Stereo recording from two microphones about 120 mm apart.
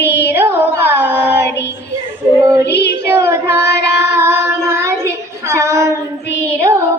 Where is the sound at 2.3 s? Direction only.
25° right (ahead or behind).